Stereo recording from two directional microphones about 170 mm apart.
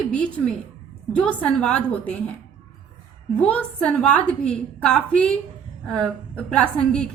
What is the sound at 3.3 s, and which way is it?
A woman's voice, 10° left (ahead or behind).